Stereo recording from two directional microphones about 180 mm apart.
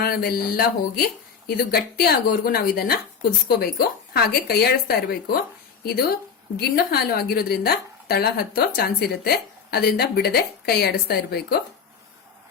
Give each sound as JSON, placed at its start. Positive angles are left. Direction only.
{"t": 0.0, "sound": "a woman's voice", "side_deg": 60}